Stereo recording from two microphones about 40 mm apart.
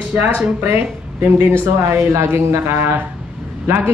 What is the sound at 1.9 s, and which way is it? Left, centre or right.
Speech, right.